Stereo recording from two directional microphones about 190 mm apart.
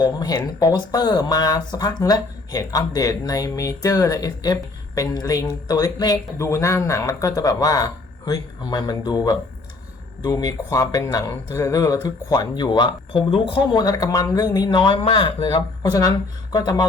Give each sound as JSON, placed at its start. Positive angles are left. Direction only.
{"t": 0.0, "sound": "speech", "side_deg": 20}